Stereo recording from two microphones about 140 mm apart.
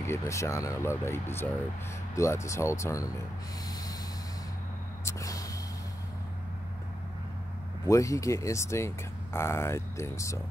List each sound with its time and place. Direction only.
0.0 s speech: 20° left (ahead or behind)
5.0 s snort: 25° left (ahead or behind)
7.8 s speech: 20° left (ahead or behind)